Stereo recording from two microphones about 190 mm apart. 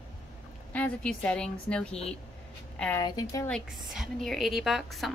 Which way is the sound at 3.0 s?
20° left (ahead or behind).